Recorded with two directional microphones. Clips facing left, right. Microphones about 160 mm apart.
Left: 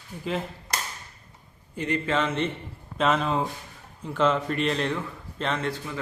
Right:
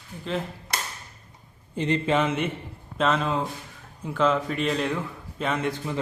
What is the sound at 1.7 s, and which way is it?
Speech, 25° right (ahead or behind).